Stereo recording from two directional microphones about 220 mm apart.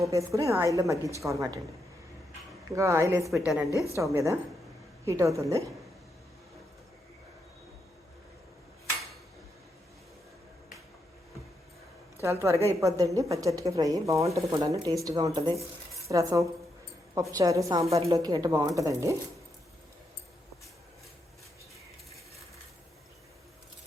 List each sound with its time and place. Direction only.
0.0 s a woman's voice: 15° right (ahead or behind)
2.7 s a woman's voice: 15° right (ahead or behind)
3.2 s a woman's voice: centre (ahead or behind)
3.7 s a woman's voice: 15° left (ahead or behind)
3.9 s a woman's voice: 15° right (ahead or behind)
12.2 s a woman's voice: 15° right (ahead or behind)